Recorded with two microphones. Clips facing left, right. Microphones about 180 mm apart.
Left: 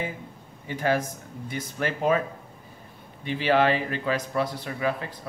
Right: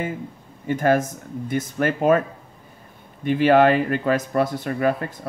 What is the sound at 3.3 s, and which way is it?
A man's voice, 50° right (ahead or behind).